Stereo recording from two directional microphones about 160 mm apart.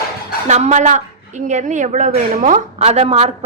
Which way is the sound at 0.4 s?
45° right (ahead or behind).